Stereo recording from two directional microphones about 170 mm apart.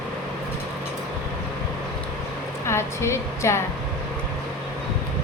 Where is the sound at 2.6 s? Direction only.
15° left (ahead or behind).